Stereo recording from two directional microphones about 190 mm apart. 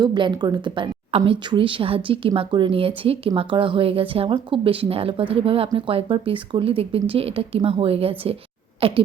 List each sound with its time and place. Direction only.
0.0 s speech: 25° right (ahead or behind)